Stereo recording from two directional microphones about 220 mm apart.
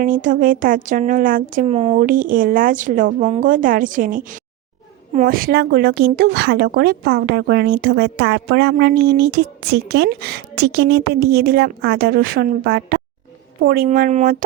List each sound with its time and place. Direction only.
0.0 s speech: 35° right (ahead or behind)